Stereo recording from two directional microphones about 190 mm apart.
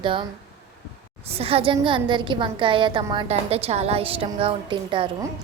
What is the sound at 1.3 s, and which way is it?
A woman's voice, 30° right (ahead or behind).